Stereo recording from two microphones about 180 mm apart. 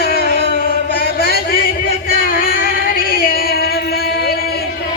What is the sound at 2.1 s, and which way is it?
Music, 55° left (ahead or behind).